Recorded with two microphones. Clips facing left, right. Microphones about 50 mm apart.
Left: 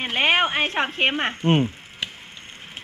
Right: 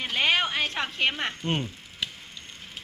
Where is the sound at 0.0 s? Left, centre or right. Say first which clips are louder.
Left 5 dB; left.